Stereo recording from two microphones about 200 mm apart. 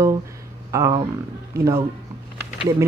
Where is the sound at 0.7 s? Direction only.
15° right (ahead or behind).